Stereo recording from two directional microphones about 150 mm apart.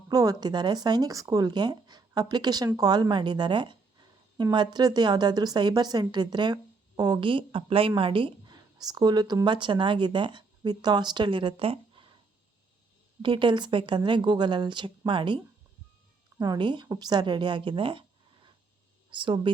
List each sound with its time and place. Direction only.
0.1 s a woman's voice: 25° right (ahead or behind)
13.2 s a woman's voice: 35° right (ahead or behind)
16.4 s a woman's voice: 30° right (ahead or behind)
19.1 s a woman's voice: 35° right (ahead or behind)